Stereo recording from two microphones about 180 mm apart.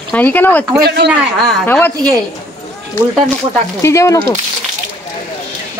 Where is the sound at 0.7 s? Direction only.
65° right (ahead or behind).